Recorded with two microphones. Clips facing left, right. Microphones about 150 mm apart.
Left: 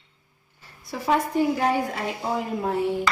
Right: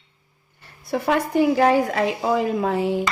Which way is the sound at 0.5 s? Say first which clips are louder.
Right 9 dB; 60° right (ahead or behind).